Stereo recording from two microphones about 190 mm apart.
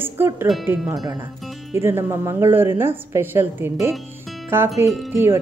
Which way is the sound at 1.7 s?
15° right (ahead or behind).